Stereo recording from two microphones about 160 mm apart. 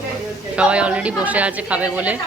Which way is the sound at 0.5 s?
5° right (ahead or behind).